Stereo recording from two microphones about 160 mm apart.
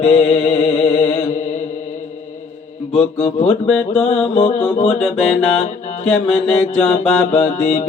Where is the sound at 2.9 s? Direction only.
35° left (ahead or behind).